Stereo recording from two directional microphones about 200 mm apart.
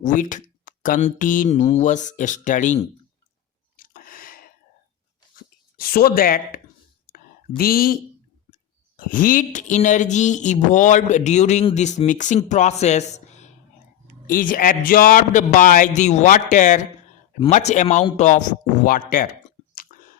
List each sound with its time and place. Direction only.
0.0 s speech: 40° left (ahead or behind)
3.8 s a sound: 45° left (ahead or behind)
5.4 s speech: 45° left (ahead or behind)
7.1 s a sound: 45° left (ahead or behind)
9.0 s a man's voice: 45° left (ahead or behind)
19.7 s chewing: 45° left (ahead or behind)